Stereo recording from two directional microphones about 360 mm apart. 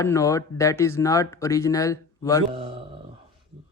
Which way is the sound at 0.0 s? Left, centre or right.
Centre.